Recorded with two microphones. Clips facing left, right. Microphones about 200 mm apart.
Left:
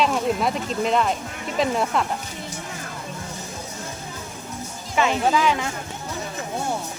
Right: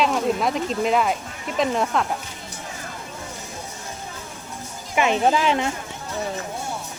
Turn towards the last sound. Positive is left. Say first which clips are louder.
# right 1 dB
turn(degrees=-30)  # may be behind; listen again after turning